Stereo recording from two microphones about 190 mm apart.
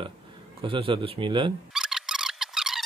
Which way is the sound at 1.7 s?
5° right (ahead or behind).